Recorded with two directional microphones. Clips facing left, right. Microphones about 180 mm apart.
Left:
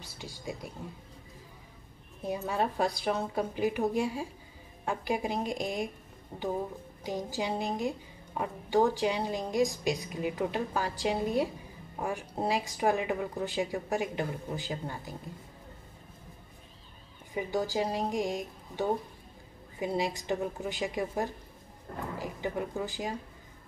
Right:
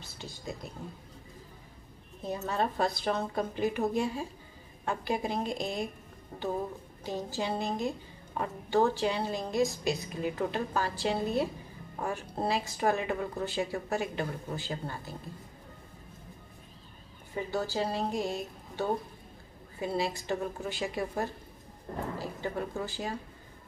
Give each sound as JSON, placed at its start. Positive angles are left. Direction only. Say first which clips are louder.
{"t": 0.0, "sound": "speech", "louder": "left 1 dB", "side_deg": 10}
{"t": 2.2, "sound": "speech", "louder": "left 1 dB", "side_deg": 10}
{"t": 7.0, "sound": "speech", "louder": "left 1 dB", "side_deg": 15}
{"t": 17.3, "sound": "speech", "louder": "left 2 dB", "side_deg": 15}